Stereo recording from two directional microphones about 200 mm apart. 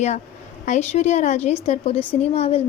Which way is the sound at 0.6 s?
35° left (ahead or behind).